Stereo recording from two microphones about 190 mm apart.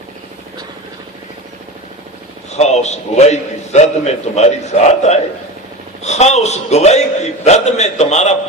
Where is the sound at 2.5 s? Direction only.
35° left (ahead or behind).